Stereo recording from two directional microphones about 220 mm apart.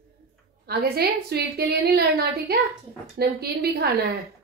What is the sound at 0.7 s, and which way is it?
A woman's voice, 45° right (ahead or behind).